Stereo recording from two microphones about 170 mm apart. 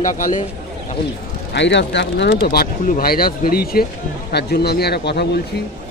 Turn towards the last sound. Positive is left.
turn(degrees=75)  # may be behind; listen again after turning